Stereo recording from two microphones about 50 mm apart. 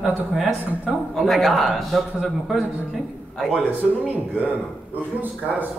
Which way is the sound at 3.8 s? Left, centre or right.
Right.